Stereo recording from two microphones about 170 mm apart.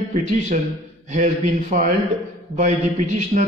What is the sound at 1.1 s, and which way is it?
Speech, 45° right (ahead or behind).